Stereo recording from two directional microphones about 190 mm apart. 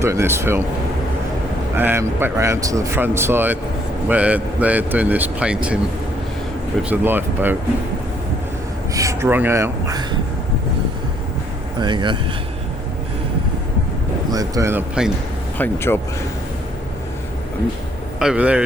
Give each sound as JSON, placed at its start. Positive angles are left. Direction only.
{"t": 0.0, "sound": "speech", "side_deg": -15}
{"t": 1.7, "sound": "speech", "side_deg": -10}
{"t": 6.8, "sound": "speech", "side_deg": -10}
{"t": 8.9, "sound": "speech", "side_deg": -15}
{"t": 11.8, "sound": "speech", "side_deg": -25}
{"t": 14.3, "sound": "speech", "side_deg": -20}
{"t": 15.5, "sound": "speech", "side_deg": 10}
{"t": 18.2, "sound": "speech", "side_deg": -5}